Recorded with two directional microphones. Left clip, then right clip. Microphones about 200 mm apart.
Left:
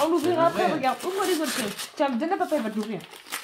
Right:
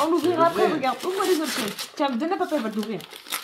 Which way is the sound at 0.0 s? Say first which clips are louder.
Right 1 dB; 15° right (ahead or behind).